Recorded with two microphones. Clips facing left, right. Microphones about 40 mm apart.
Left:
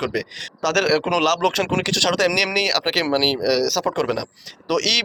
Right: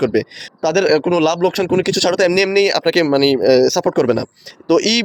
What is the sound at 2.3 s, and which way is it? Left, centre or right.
Speech, centre.